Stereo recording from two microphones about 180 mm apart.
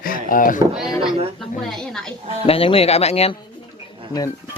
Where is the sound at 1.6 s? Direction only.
Centre (ahead or behind).